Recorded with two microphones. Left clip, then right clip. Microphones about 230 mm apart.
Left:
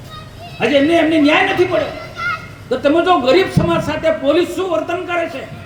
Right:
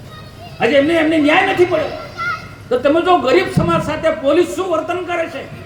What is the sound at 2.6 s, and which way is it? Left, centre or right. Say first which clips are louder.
A man's voice: even; left.